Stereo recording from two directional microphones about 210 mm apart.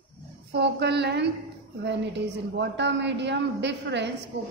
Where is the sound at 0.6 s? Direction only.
55° right (ahead or behind).